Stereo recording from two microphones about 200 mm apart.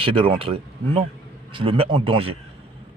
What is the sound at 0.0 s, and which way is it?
Speech, 25° right (ahead or behind).